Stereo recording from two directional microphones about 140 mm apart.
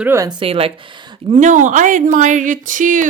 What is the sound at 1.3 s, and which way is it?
Speech, 60° right (ahead or behind).